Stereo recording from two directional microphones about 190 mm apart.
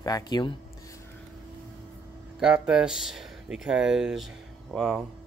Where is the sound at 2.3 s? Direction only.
5° right (ahead or behind).